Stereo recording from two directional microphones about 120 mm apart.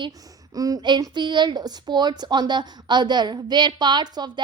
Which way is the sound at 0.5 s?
30° right (ahead or behind).